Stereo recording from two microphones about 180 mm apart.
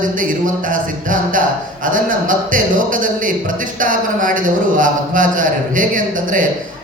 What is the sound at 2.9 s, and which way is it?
A man's voice, 50° right (ahead or behind).